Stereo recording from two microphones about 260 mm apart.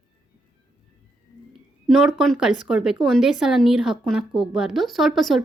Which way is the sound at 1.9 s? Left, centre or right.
Centre.